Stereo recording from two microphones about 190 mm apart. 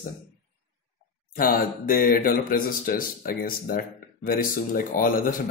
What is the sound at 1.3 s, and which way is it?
Speech, 50° left (ahead or behind).